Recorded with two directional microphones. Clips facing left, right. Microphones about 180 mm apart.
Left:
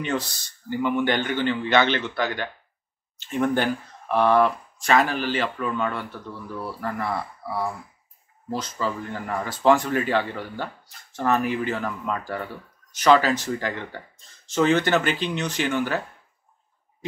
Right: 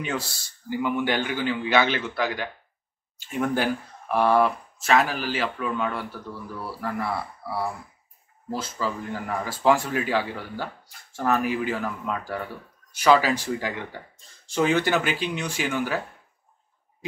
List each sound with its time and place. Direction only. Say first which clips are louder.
0.0 s speech: left 3 dB; 5° right (ahead or behind)
8.5 s speech: left 1 dB; 5° right (ahead or behind)